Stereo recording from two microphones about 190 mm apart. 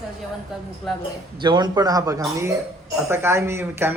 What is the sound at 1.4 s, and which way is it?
A man's voice, 25° right (ahead or behind).